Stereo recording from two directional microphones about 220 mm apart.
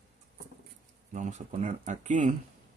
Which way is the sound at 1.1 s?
30° right (ahead or behind).